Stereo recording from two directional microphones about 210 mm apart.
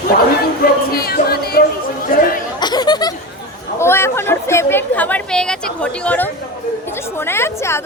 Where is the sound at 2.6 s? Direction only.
20° left (ahead or behind).